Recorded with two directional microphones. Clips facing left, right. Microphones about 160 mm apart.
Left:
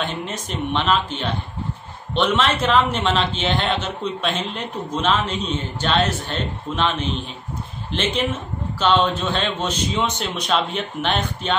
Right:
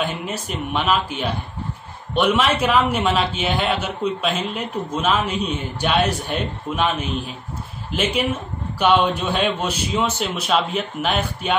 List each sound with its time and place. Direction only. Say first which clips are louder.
0.0 s a man's voice: right 2 dB; 10° right (ahead or behind)